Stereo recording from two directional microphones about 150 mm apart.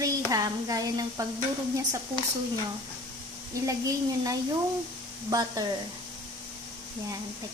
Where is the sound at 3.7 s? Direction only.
25° right (ahead or behind).